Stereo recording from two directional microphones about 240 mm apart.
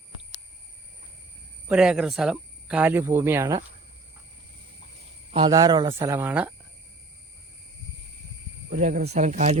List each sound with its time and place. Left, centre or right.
1.7 s speech: centre
5.3 s speech: centre
8.8 s speech: right